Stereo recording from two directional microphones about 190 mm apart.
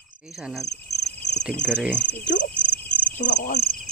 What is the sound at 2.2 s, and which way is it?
Speech, 70° left (ahead or behind).